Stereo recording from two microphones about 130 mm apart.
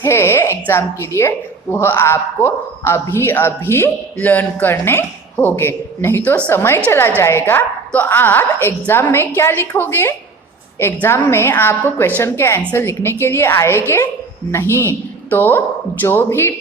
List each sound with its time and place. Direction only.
0.0 s a woman's voice: 20° left (ahead or behind)